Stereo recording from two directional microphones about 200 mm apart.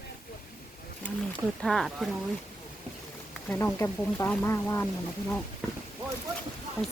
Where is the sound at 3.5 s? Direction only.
10° left (ahead or behind).